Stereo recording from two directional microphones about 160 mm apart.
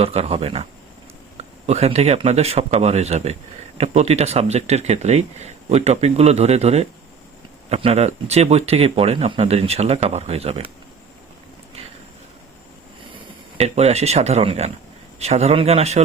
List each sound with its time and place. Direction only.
0.0 s speech: 40° right (ahead or behind)
13.6 s speech: 40° right (ahead or behind)